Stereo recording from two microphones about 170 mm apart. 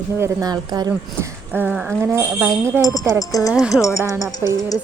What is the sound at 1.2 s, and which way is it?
Speech, 10° right (ahead or behind).